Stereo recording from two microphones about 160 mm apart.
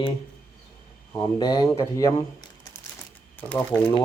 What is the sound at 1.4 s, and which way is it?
Speech, 25° left (ahead or behind).